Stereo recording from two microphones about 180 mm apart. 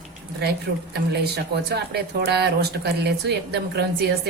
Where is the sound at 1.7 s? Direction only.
65° right (ahead or behind).